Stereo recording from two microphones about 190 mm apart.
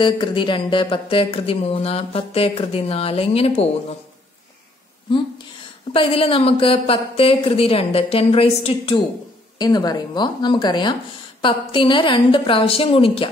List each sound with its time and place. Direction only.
0.0 s speech: 25° left (ahead or behind)
5.9 s a woman's voice: 30° left (ahead or behind)